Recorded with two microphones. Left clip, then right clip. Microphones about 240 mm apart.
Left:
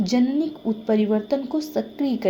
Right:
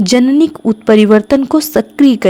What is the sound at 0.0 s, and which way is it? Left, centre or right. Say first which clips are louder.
A woman's voice: right 12 dB; right.